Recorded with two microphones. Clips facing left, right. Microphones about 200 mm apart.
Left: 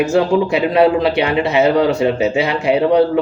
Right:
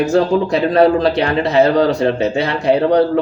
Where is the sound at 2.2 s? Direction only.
35° right (ahead or behind).